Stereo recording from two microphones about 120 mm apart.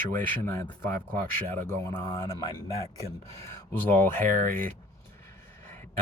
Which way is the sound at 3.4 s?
15° left (ahead or behind).